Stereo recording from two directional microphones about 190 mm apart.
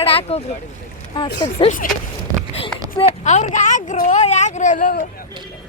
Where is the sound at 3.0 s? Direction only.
40° left (ahead or behind).